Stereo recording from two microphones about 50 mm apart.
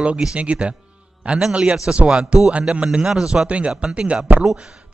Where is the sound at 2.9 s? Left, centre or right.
Centre.